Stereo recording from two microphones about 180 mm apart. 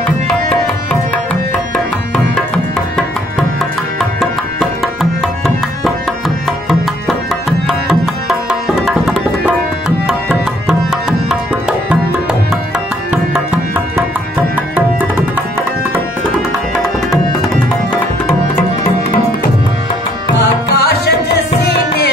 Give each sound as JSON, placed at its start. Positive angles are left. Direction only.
{"t": 2.1, "sound": "music", "side_deg": 5}
{"t": 6.7, "sound": "music", "side_deg": 0}
{"t": 10.7, "sound": "music", "side_deg": 0}
{"t": 20.7, "sound": "music", "side_deg": 65}